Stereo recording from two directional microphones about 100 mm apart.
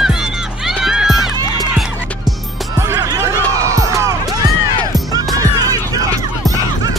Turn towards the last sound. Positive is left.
turn(degrees=-35)  # may be behind; listen again after turning